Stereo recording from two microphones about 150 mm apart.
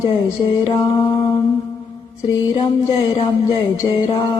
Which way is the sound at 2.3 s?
40° left (ahead or behind).